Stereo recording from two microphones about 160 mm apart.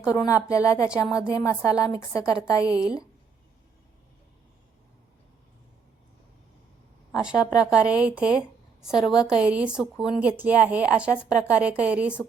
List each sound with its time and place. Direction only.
0.1 s speech: 20° left (ahead or behind)
7.1 s a woman's voice: 5° right (ahead or behind)